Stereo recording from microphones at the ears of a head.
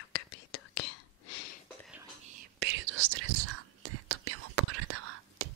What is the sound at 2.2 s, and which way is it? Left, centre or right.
Whispering, right.